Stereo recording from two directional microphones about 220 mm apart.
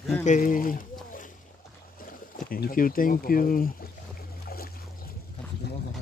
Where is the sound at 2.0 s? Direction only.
40° left (ahead or behind).